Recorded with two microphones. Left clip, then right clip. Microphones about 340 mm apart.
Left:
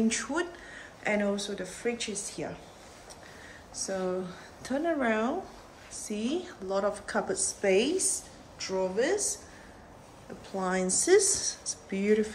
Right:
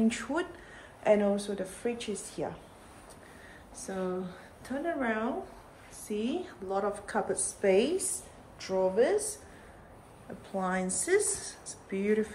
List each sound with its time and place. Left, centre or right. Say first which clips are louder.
0.1 s a woman's voice: left 2 dB; centre
3.7 s a woman's voice: left 3 dB; centre
10.5 s a woman's voice: left 2 dB; centre